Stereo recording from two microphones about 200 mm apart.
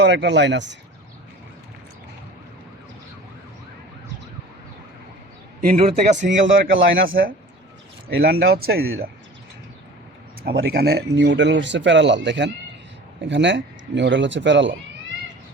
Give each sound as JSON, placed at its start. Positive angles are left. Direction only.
{"t": 0.0, "sound": "speech", "side_deg": -60}
{"t": 5.7, "sound": "a man's voice", "side_deg": -30}
{"t": 6.2, "sound": "speech", "side_deg": -70}
{"t": 7.1, "sound": "speech", "side_deg": -45}
{"t": 10.4, "sound": "speech", "side_deg": -50}